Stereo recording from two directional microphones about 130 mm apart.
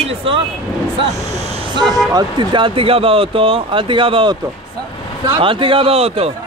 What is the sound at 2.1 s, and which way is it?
Speech, 40° right (ahead or behind).